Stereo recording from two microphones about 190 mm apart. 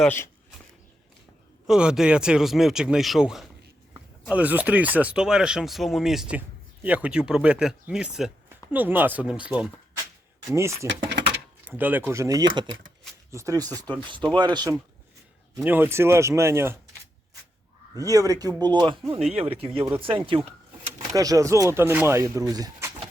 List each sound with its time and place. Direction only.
0.0 s speech: 10° left (ahead or behind)
1.6 s speech: 5° right (ahead or behind); by 14.8 s 20° right (ahead or behind)
15.5 s speech: 10° right (ahead or behind)
17.9 s speech: 20° right (ahead or behind)
19.2 s speech: 30° right (ahead or behind)